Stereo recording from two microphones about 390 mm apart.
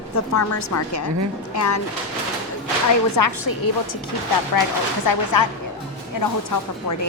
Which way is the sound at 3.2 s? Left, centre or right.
Left.